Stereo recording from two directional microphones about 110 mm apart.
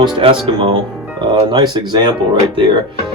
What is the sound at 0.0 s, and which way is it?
Speech, 45° right (ahead or behind).